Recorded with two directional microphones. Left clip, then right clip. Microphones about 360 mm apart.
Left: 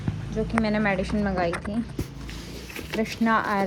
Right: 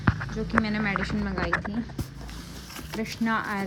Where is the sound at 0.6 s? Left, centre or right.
Centre.